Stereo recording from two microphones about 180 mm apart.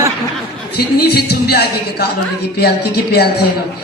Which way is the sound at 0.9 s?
60° left (ahead or behind).